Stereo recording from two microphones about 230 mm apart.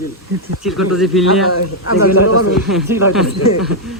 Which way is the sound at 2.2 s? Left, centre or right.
Left.